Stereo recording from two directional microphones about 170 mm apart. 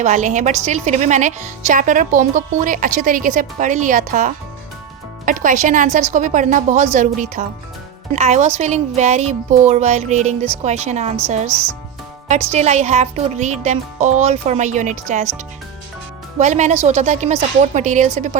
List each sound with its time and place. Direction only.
0.0 s a woman's voice: 45° right (ahead or behind)
11.4 s speech: 15° right (ahead or behind)
12.3 s a woman's voice: 45° right (ahead or behind)
16.4 s a woman's voice: 45° right (ahead or behind)